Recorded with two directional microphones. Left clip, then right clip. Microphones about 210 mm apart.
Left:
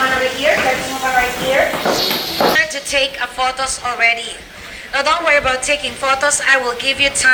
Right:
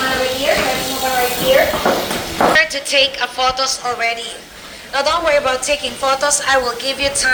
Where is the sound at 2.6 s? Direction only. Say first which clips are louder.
Right 2 dB; 35° right (ahead or behind).